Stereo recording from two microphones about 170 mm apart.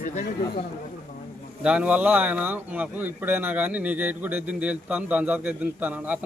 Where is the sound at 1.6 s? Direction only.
5° right (ahead or behind).